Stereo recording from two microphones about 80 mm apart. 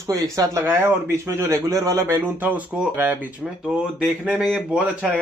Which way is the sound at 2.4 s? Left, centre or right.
Right.